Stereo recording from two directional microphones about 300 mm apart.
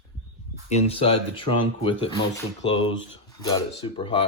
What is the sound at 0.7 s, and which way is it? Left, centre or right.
Speech, centre.